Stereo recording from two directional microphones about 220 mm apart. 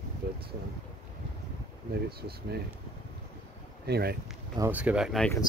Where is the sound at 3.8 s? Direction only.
45° right (ahead or behind).